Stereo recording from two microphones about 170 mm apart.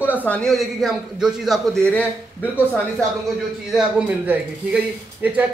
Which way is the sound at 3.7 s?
5° right (ahead or behind).